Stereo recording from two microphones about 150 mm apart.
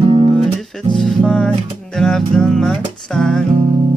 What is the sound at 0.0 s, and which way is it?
Music, 35° right (ahead or behind).